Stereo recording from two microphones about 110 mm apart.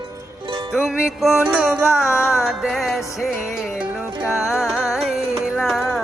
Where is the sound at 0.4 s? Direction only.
45° right (ahead or behind).